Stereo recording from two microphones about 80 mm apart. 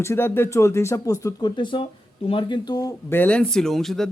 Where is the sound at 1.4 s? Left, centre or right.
Left.